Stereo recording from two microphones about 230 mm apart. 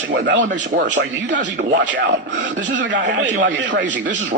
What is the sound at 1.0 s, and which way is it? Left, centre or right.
Speech, right.